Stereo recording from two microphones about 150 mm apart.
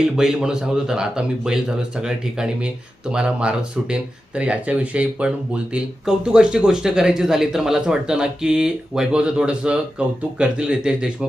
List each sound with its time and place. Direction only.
0.2 s a man's voice: 5° right (ahead or behind)